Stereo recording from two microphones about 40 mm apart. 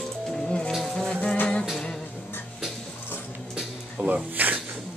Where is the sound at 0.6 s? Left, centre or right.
Centre.